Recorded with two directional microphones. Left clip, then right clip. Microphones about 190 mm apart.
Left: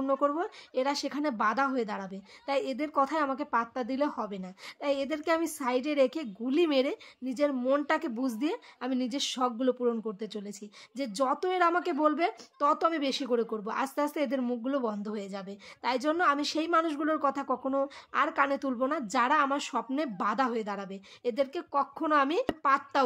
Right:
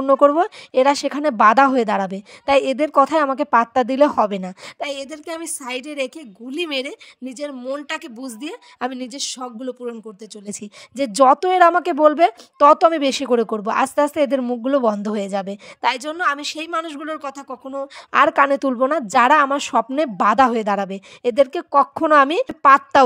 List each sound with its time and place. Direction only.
0.0 s speech: 40° right (ahead or behind)
5.6 s speech: centre (ahead or behind)
6.0 s speech: 40° right (ahead or behind)
9.4 s speech: centre (ahead or behind)
10.4 s speech: 40° right (ahead or behind)
17.4 s speech: 5° right (ahead or behind)
18.1 s speech: 40° right (ahead or behind)